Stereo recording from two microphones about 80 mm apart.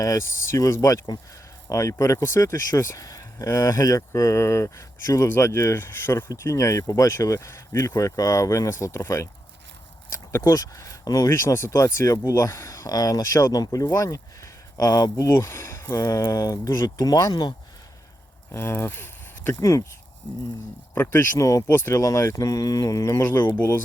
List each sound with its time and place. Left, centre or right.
0.0 s speech: left
1.7 s speech: left
11.3 s speech: left
15.1 s speech: left
18.5 s speech: left
20.9 s speech: left
21.3 s speech: left
21.7 s speech: left
21.9 s speech: left
23.2 s speech: left